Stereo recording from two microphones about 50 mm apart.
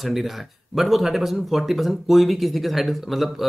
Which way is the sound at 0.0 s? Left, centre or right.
Centre.